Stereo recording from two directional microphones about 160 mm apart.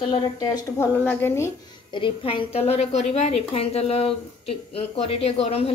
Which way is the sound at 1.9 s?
30° left (ahead or behind).